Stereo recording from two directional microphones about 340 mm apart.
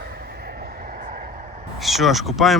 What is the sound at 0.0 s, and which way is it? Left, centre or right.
Vehicle, right.